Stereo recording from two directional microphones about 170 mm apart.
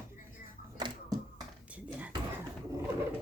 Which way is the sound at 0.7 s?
25° right (ahead or behind).